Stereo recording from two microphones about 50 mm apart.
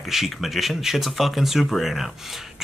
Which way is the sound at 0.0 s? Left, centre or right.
Centre.